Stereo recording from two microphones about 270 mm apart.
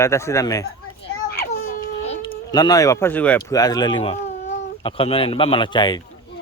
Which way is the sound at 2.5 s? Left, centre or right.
Centre.